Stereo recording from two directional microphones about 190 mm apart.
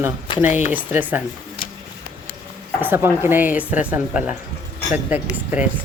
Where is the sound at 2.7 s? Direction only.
10° right (ahead or behind).